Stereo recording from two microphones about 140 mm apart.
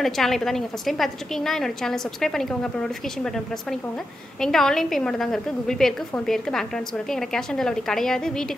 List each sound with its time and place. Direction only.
0.0 s a woman's voice: centre (ahead or behind)
4.4 s a woman's voice: 5° left (ahead or behind)